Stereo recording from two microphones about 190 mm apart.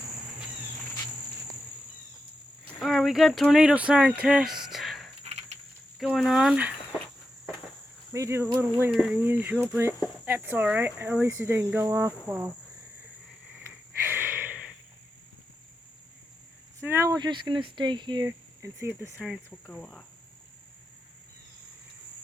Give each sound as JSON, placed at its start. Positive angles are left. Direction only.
{"t": 2.7, "sound": "speech", "side_deg": 0}
{"t": 5.2, "sound": "cricket", "side_deg": -35}
{"t": 6.0, "sound": "speech", "side_deg": 0}
{"t": 8.1, "sound": "speech", "side_deg": -15}
{"t": 13.5, "sound": "a sound", "side_deg": -10}
{"t": 16.8, "sound": "speech", "side_deg": -15}
{"t": 19.5, "sound": "speech", "side_deg": 5}